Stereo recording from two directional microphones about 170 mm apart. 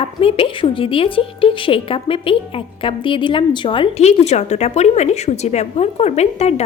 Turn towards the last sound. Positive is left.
turn(degrees=40)  # may be behind; listen again after turning